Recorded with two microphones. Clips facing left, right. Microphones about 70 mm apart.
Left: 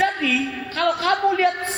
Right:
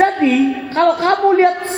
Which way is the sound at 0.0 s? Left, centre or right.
Right.